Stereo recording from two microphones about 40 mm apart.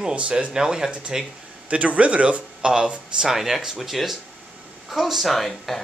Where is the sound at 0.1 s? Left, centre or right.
Right.